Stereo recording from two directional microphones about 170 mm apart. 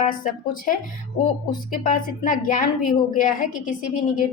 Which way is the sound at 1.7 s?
50° left (ahead or behind).